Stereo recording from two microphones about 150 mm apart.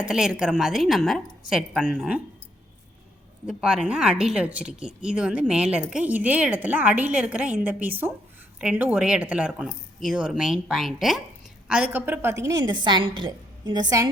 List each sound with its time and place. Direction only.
0.1 s a woman's voice: 5° right (ahead or behind)
3.4 s a woman's voice: 5° right (ahead or behind); by 14.1 s 25° right (ahead or behind)